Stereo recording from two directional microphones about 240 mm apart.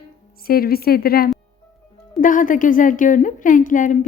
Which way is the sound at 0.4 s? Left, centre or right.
Left.